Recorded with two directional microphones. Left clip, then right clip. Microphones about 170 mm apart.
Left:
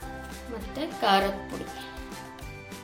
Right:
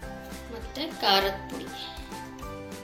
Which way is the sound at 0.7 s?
55° left (ahead or behind).